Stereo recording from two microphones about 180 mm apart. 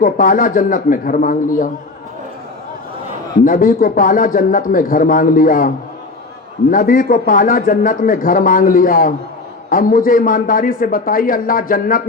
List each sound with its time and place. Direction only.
0.0 s speech: 50° left (ahead or behind)
3.4 s speech: 50° left (ahead or behind)